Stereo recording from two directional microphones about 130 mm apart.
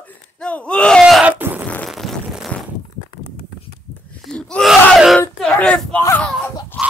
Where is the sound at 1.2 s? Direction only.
15° right (ahead or behind).